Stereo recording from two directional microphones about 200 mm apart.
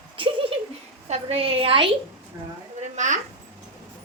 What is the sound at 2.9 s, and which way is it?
Speech, 35° right (ahead or behind).